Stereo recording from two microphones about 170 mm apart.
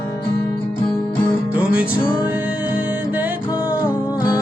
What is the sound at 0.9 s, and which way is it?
Music, 10° left (ahead or behind).